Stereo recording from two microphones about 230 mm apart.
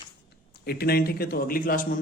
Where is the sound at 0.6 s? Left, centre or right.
Left.